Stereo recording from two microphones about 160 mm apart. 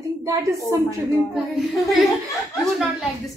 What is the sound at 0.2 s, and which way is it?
Speech, 20° right (ahead or behind).